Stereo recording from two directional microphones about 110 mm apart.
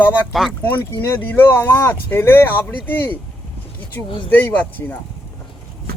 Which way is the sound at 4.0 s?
15° left (ahead or behind).